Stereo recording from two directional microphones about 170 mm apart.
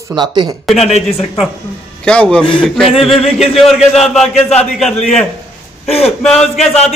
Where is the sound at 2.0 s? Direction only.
5° left (ahead or behind).